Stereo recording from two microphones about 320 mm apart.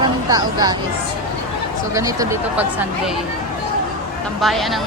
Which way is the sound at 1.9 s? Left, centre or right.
Centre.